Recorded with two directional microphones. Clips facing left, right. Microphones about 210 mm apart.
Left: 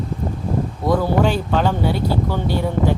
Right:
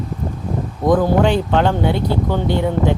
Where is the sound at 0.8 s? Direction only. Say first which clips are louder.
Right 4 dB; 20° right (ahead or behind).